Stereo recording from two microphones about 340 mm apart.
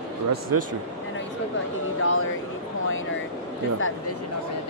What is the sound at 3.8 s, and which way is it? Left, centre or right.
Speech, left.